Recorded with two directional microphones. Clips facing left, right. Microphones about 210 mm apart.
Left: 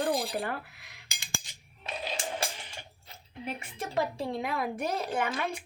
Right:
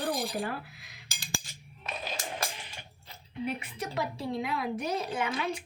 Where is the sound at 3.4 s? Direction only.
50° left (ahead or behind).